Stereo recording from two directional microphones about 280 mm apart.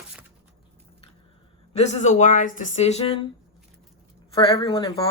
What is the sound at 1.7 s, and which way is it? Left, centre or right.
Speech, left.